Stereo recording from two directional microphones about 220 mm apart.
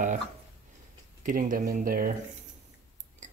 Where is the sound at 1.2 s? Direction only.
40° right (ahead or behind).